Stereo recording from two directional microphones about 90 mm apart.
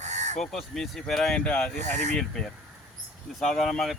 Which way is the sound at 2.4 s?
5° left (ahead or behind).